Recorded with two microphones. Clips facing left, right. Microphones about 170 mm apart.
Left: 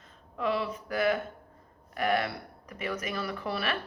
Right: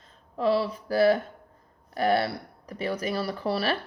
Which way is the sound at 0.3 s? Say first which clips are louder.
Right 6 dB; 35° right (ahead or behind).